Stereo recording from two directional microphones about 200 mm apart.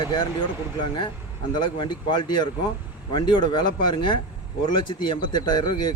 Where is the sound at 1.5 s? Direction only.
25° left (ahead or behind).